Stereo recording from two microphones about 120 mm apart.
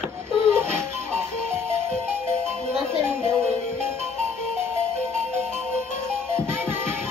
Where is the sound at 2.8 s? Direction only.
20° right (ahead or behind).